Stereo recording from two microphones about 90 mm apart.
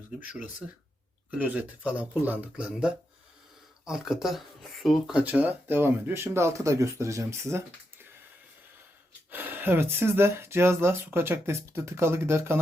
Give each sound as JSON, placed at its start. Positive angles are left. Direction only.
{"t": 1.3, "sound": "speech", "side_deg": -15}
{"t": 5.2, "sound": "speech", "side_deg": -20}
{"t": 9.3, "sound": "speech", "side_deg": -20}